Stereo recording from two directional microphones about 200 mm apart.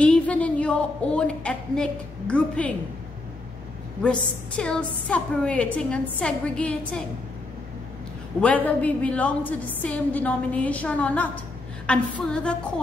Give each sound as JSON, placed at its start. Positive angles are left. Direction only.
{"t": 0.0, "sound": "a woman's voice", "side_deg": 5}
{"t": 4.0, "sound": "a woman's voice", "side_deg": 5}
{"t": 8.4, "sound": "a woman's voice", "side_deg": 5}